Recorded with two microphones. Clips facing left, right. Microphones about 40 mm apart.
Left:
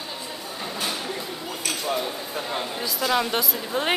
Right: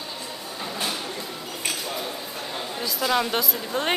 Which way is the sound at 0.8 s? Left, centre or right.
Centre.